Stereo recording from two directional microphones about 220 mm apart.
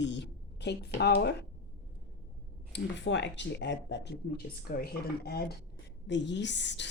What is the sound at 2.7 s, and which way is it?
A woman's voice, 55° left (ahead or behind).